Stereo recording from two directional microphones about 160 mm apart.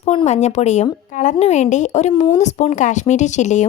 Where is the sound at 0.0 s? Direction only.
40° left (ahead or behind).